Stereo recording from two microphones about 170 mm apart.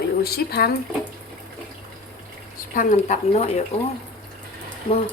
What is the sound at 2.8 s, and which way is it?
Speech, 45° left (ahead or behind).